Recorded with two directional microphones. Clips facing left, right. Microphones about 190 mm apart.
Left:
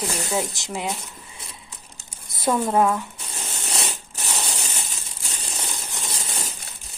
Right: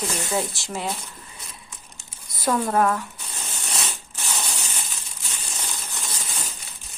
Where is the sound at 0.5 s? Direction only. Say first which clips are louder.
Left 1 dB; 15° left (ahead or behind).